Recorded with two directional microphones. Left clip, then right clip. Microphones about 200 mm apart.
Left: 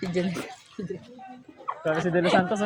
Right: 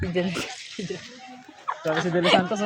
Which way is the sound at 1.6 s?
20° right (ahead or behind).